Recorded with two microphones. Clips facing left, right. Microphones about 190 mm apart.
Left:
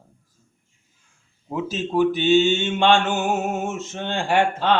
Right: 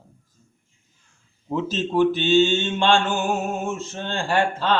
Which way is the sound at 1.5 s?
10° left (ahead or behind).